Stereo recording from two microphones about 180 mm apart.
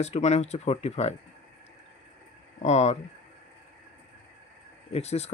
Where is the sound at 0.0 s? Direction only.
40° left (ahead or behind).